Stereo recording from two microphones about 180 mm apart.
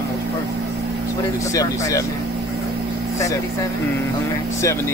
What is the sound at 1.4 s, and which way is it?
Speech, 20° left (ahead or behind).